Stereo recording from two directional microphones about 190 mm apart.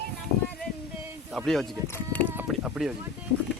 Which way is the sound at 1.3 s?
Centre (ahead or behind).